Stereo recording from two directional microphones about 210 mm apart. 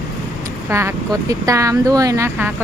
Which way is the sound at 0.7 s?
15° right (ahead or behind).